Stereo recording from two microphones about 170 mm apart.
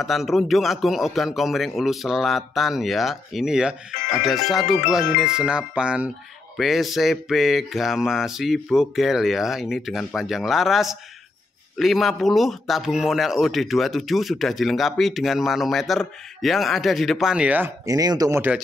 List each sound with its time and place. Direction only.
0.0 s a man's voice: centre (ahead or behind)
17.8 s speech: 20° right (ahead or behind)